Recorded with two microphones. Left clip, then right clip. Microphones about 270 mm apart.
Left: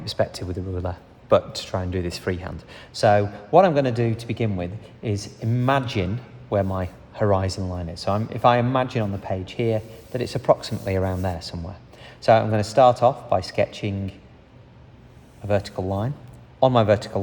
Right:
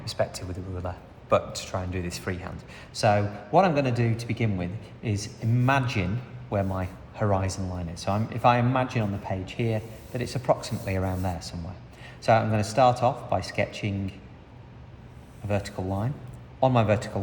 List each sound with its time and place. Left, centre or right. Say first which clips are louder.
0.0 s speech: left 4 dB; left
15.4 s speech: left 6 dB; left